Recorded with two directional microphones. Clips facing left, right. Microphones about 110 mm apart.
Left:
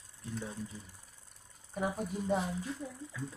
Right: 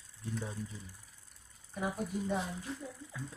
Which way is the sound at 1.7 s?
15° left (ahead or behind).